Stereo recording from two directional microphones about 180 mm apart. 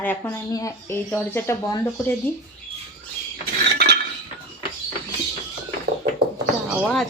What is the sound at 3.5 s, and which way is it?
Chink, 60° right (ahead or behind).